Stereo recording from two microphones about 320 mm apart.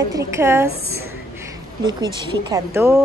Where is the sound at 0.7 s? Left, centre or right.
Right.